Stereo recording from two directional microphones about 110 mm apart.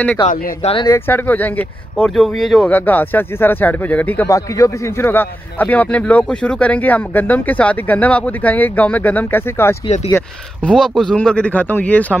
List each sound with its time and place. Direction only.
0.8 s a man's voice: 20° left (ahead or behind)
2.0 s speech: 5° left (ahead or behind)
2.7 s a man's voice: 15° left (ahead or behind)
4.3 s a man's voice: 25° left (ahead or behind)
10.6 s a man's voice: 5° left (ahead or behind)